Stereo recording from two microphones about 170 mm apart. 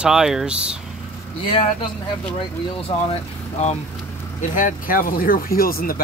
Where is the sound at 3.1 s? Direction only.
40° left (ahead or behind); by 5.9 s 60° left (ahead or behind).